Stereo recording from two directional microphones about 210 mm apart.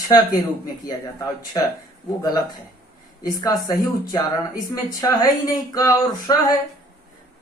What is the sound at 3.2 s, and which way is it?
Speech, 15° left (ahead or behind).